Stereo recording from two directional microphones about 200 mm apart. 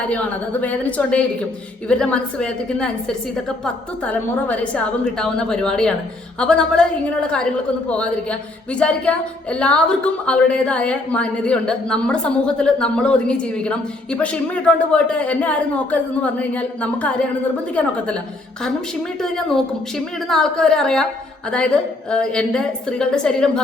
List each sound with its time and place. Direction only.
0.1 s a woman's voice: 5° left (ahead or behind)
20.2 s a woman's voice: 5° left (ahead or behind)